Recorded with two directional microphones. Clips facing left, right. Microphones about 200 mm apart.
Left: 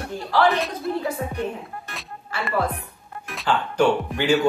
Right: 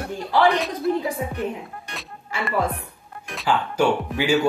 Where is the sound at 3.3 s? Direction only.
5° right (ahead or behind).